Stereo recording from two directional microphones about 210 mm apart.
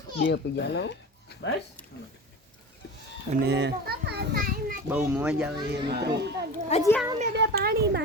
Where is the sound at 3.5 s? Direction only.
55° right (ahead or behind).